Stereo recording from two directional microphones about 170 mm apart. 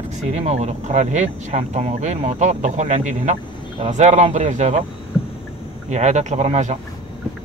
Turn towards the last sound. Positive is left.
turn(degrees=-40)  # may be behind; listen again after turning